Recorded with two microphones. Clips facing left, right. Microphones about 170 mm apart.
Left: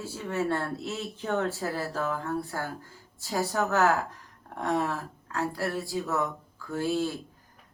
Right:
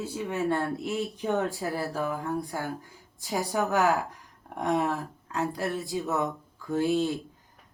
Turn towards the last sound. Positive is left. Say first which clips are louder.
# right 3 dB
turn(degrees=-20)  # may be behind; listen again after turning